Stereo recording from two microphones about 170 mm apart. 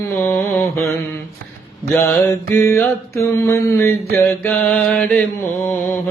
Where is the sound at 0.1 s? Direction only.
15° left (ahead or behind).